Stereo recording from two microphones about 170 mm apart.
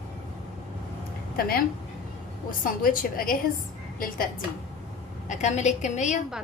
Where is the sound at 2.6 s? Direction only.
55° left (ahead or behind).